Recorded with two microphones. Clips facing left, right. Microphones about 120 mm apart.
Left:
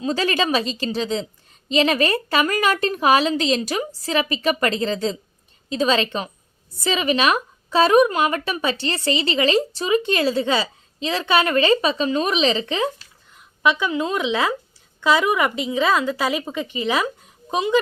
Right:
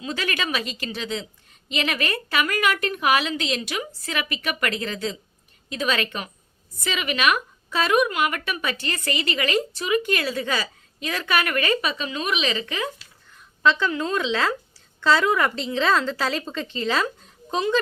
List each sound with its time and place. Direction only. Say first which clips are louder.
0.0 s a woman's voice: left 7 dB; 35° left (ahead or behind)
13.3 s a woman's voice: left 1 dB; 15° left (ahead or behind)